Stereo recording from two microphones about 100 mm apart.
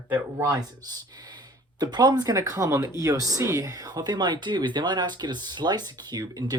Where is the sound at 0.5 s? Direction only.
40° right (ahead or behind).